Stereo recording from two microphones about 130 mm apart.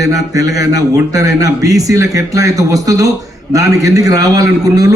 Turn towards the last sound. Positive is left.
turn(degrees=-30)  # may be behind; listen again after turning